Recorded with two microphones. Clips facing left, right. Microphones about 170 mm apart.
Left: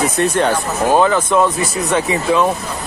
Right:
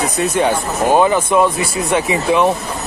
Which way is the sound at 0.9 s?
15° right (ahead or behind).